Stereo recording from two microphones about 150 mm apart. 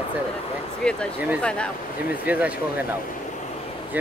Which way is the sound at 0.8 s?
5° left (ahead or behind).